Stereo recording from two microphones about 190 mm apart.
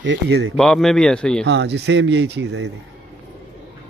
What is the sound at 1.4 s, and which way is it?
Speech, 65° right (ahead or behind).